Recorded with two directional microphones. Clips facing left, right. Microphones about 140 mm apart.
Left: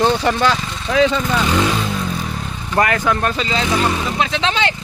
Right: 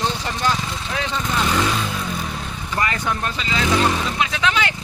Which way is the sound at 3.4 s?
35° left (ahead or behind).